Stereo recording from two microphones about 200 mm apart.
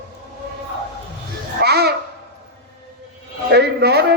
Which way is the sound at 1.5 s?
55° right (ahead or behind).